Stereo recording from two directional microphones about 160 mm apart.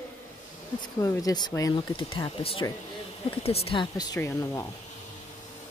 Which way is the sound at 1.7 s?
35° left (ahead or behind).